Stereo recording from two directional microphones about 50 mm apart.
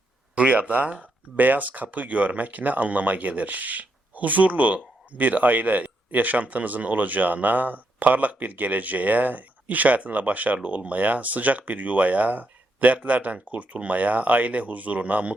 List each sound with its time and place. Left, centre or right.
0.3 s speech: right